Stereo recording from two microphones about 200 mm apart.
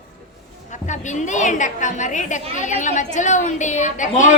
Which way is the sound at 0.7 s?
35° left (ahead or behind).